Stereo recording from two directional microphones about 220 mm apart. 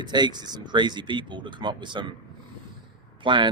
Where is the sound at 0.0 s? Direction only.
20° right (ahead or behind).